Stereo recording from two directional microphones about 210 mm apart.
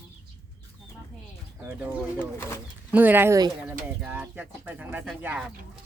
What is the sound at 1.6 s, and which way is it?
Speech, 5° right (ahead or behind).